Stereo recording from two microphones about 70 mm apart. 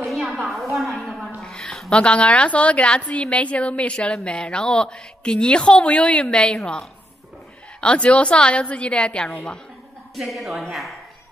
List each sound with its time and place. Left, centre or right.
0.0 s a sound: centre
1.4 s a woman's voice: centre
10.1 s a woman's voice: centre